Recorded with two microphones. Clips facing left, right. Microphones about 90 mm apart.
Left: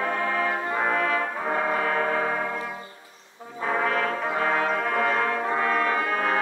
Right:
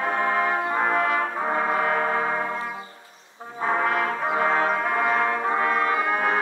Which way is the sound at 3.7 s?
25° right (ahead or behind).